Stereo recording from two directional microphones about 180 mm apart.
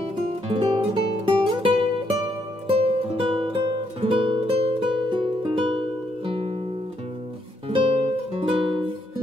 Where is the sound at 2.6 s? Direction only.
30° right (ahead or behind).